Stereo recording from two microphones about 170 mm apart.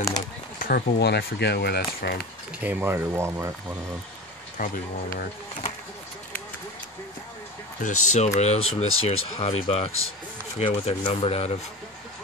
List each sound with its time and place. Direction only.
0.6 s speech: 65° left (ahead or behind)
2.6 s speech: 10° right (ahead or behind)
4.6 s speech: 50° left (ahead or behind)
7.8 s speech: 45° left (ahead or behind)